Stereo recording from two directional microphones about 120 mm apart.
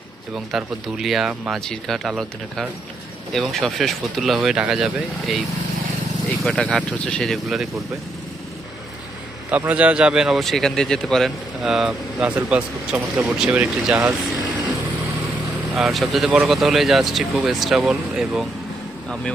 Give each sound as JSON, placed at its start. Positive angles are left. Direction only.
{"t": 0.3, "sound": "a man's voice", "side_deg": -5}
{"t": 6.2, "sound": "a man's voice", "side_deg": 10}
{"t": 9.5, "sound": "a man's voice", "side_deg": -10}
{"t": 15.7, "sound": "a man's voice", "side_deg": 0}